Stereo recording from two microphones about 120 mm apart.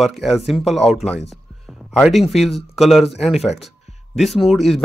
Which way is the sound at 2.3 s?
Centre (ahead or behind).